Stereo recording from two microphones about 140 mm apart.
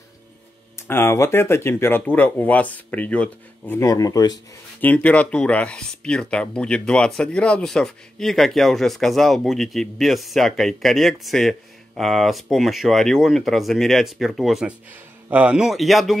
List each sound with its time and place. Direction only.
0.7 s speech: 15° left (ahead or behind)
3.8 s speech: 25° left (ahead or behind)
4.8 s speech: 10° left (ahead or behind)